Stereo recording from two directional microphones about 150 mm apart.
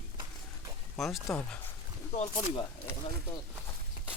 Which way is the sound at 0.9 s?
Centre (ahead or behind).